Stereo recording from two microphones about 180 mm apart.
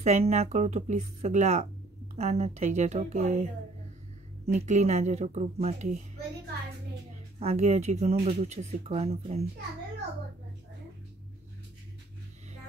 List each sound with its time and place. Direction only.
0.0 s speech: 40° right (ahead or behind)
4.5 s speech: 40° right (ahead or behind)
7.3 s speech: 35° right (ahead or behind)